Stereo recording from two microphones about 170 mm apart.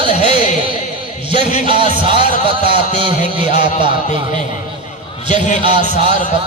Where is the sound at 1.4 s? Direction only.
40° left (ahead or behind).